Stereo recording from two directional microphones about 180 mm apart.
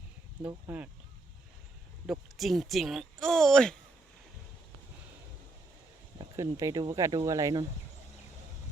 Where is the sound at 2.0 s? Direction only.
Centre (ahead or behind).